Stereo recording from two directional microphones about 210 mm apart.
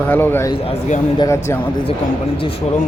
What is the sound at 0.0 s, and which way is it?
Speech, 10° left (ahead or behind).